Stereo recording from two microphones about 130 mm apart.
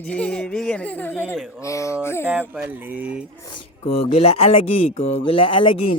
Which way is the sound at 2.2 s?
10° right (ahead or behind).